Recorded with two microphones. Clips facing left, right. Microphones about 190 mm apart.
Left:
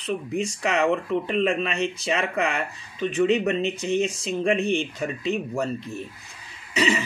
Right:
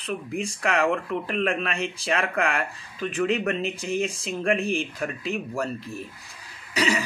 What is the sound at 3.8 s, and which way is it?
Speech, 35° left (ahead or behind).